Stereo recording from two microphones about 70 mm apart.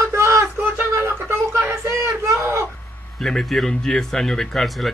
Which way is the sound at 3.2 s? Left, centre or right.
Centre.